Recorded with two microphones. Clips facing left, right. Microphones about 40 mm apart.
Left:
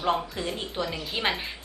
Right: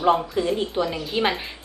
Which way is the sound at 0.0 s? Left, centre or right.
Centre.